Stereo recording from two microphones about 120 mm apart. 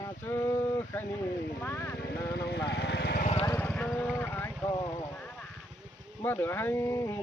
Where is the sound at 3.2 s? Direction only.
65° left (ahead or behind).